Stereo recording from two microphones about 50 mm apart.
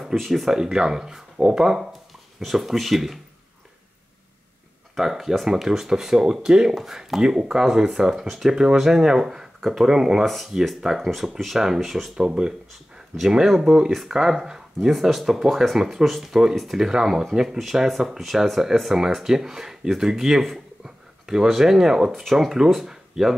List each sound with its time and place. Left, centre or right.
0.1 s speech: centre
0.5 s speech: centre
4.9 s speech: centre
10.2 s speech: centre
12.2 s speech: centre